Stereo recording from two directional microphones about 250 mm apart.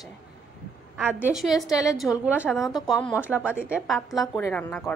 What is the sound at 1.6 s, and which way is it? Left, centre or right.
Speech, centre.